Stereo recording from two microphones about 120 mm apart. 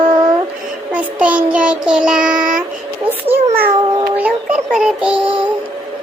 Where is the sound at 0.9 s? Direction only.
10° right (ahead or behind).